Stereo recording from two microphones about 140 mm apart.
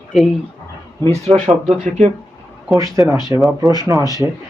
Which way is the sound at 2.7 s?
25° right (ahead or behind).